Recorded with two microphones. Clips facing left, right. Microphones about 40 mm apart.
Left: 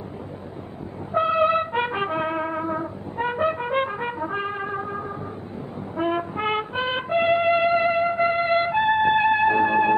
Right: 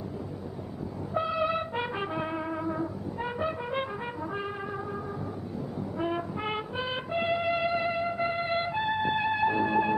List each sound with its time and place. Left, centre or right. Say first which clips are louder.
1.1 s brass instrument: left 9 dB; left
5.9 s music: left 8 dB; left